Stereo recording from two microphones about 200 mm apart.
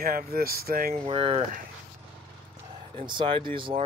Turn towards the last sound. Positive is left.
turn(degrees=-25)  # may be behind; listen again after turning